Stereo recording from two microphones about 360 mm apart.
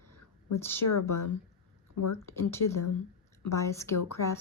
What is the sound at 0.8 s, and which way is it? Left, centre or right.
Speech, left.